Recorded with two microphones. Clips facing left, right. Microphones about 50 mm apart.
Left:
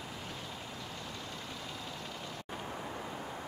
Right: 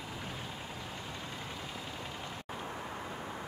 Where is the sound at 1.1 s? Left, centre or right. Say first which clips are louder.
Right 1 dB; centre.